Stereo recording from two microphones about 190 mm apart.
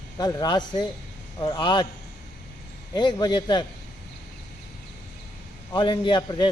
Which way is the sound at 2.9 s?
25° left (ahead or behind).